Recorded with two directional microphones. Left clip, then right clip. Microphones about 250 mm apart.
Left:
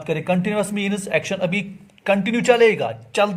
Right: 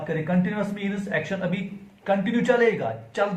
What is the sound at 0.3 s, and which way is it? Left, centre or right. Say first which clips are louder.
A man's voice: left 6 dB; left.